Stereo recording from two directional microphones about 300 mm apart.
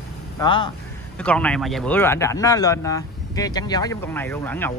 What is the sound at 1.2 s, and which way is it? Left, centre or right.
Speech, centre.